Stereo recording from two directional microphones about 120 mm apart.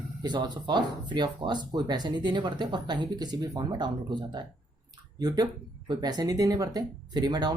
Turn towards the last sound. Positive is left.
turn(degrees=-35)  # may be behind; listen again after turning